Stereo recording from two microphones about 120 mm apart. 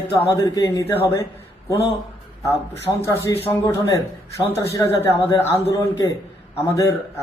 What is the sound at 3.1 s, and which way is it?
Speech, 20° left (ahead or behind).